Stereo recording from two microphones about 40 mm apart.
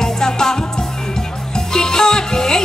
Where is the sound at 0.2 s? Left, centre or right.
Centre.